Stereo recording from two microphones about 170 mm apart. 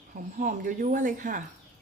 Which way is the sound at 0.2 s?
50° right (ahead or behind).